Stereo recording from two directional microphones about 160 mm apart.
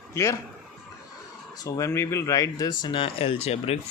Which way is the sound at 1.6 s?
20° left (ahead or behind).